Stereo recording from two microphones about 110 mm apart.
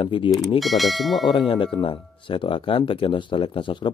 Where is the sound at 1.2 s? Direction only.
50° left (ahead or behind).